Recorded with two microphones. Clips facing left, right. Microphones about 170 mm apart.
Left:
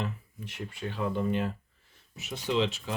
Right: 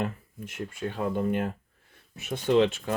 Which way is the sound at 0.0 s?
50° right (ahead or behind).